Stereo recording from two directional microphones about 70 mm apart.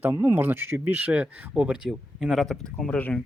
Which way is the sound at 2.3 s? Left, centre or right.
Centre.